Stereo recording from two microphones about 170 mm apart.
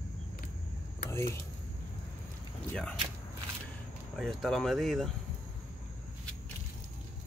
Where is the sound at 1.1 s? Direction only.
15° left (ahead or behind).